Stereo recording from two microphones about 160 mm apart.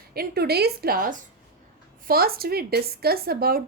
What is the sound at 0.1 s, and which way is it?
A woman's voice, 75° right (ahead or behind).